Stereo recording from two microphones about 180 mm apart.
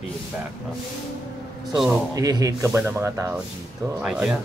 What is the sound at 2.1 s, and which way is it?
Speech, 20° right (ahead or behind).